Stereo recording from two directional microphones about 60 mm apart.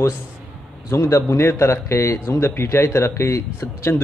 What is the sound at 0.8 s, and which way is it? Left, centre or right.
Speech, left.